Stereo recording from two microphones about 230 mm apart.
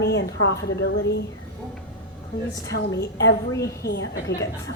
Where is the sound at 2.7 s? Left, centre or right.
Left.